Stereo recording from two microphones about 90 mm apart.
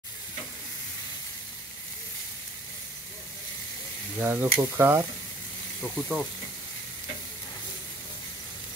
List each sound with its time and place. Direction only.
4.2 s speech: 20° right (ahead or behind)
5.8 s speech: 5° right (ahead or behind)